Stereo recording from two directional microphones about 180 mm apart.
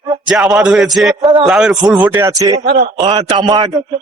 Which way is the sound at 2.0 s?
15° right (ahead or behind).